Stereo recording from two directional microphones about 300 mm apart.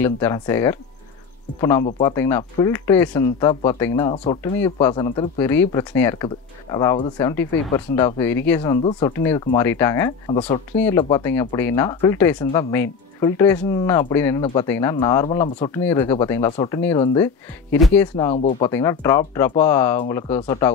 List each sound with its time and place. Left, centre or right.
0.0 s speech: centre
4.1 s speech: centre
10.7 s speech: centre
18.3 s speech: left
18.7 s speech: centre